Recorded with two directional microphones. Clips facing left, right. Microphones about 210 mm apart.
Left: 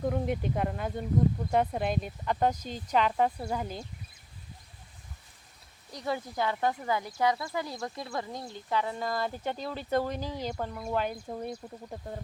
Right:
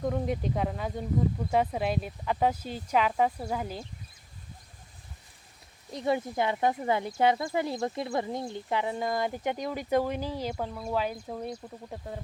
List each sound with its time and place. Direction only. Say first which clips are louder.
0.0 s speech: even; centre (ahead or behind)
5.9 s speech: right 5 dB; 20° right (ahead or behind); by 12.2 s centre (ahead or behind)